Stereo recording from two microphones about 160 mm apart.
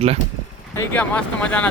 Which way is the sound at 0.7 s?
10° left (ahead or behind).